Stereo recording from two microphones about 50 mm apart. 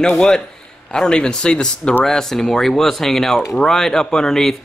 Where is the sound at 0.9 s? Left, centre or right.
Centre.